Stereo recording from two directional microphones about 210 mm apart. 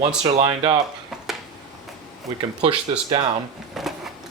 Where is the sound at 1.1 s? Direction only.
Centre (ahead or behind).